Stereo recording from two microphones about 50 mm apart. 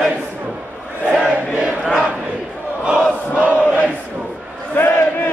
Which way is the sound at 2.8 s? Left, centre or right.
Right.